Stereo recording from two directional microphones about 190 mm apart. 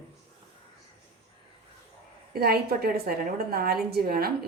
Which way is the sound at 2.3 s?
55° right (ahead or behind).